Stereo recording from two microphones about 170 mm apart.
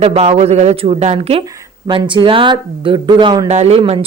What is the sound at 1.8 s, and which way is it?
Speech, 25° right (ahead or behind).